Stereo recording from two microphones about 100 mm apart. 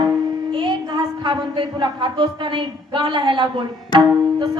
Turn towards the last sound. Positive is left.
turn(degrees=-55)  # may be behind; listen again after turning